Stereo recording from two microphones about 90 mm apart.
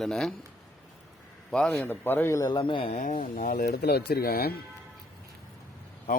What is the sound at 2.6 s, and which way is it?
Speech, 80° left.